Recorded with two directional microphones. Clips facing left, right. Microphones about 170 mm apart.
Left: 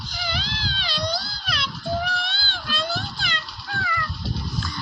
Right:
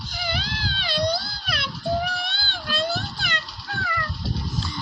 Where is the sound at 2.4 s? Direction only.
55° right (ahead or behind).